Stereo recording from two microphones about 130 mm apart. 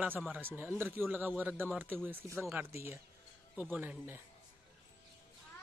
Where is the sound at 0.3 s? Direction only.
15° right (ahead or behind).